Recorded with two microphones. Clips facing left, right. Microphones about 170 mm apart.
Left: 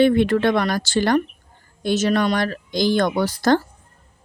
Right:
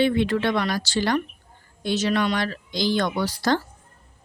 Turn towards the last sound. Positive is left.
turn(degrees=50)  # may be behind; listen again after turning